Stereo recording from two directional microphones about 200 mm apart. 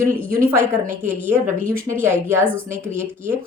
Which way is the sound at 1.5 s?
40° right (ahead or behind).